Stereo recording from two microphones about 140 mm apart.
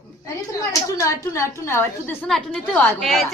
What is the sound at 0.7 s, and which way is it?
A woman's voice, 20° left (ahead or behind).